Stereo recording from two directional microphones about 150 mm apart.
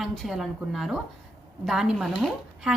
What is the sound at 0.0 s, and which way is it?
Speech, centre (ahead or behind).